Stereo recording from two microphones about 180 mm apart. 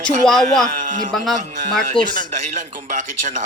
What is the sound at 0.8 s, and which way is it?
Speech, 45° right (ahead or behind).